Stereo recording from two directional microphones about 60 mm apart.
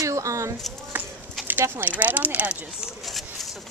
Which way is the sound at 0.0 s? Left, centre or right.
Right.